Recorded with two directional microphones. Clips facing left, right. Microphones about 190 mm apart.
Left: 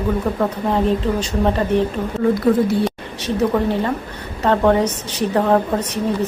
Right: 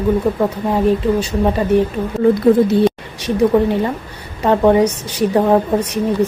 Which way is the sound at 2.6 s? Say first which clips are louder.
Right 5 dB; 15° right (ahead or behind).